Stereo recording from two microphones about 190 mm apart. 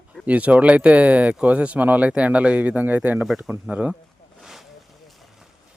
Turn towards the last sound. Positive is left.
turn(degrees=0)  # may be behind; listen again after turning